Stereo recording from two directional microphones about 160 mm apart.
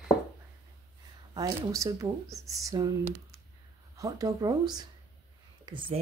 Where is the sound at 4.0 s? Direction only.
20° right (ahead or behind).